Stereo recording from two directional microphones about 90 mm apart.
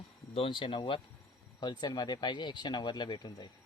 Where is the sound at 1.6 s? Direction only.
55° left (ahead or behind).